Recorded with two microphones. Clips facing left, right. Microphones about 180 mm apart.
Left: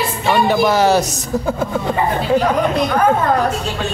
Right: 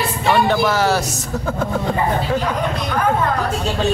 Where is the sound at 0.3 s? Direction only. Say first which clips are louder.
Left 2 dB; 10° left (ahead or behind).